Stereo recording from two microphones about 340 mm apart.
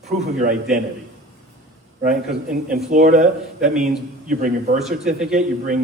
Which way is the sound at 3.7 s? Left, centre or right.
Centre.